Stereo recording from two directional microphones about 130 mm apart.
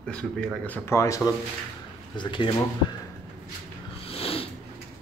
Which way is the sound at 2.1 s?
40° left (ahead or behind).